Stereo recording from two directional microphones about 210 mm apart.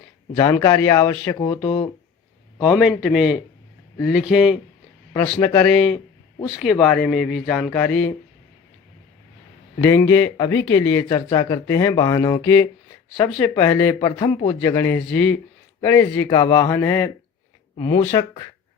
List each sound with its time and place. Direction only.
0.3 s speech: 15° left (ahead or behind)
2.6 s speech: centre (ahead or behind)
5.4 s speech: 10° left (ahead or behind)
9.7 s speech: 15° left (ahead or behind)
15.0 s speech: 5° left (ahead or behind)